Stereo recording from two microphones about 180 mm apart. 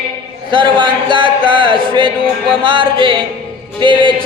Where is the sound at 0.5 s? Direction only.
25° right (ahead or behind).